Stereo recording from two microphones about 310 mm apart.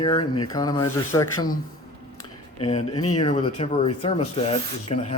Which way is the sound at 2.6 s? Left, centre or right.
Centre.